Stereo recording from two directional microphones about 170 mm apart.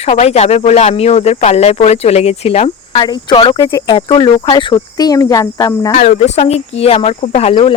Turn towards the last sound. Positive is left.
turn(degrees=30)  # may be behind; listen again after turning